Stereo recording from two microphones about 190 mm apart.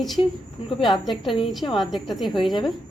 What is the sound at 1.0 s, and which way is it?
A woman's voice, centre (ahead or behind).